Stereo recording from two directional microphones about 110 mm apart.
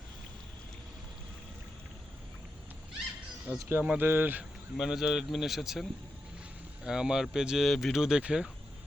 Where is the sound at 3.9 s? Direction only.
20° right (ahead or behind).